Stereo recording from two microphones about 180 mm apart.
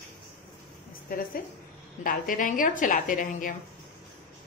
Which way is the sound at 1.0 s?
55° left (ahead or behind).